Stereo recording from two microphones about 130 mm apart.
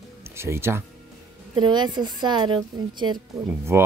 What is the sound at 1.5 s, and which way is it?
A woman's voice, 35° right (ahead or behind).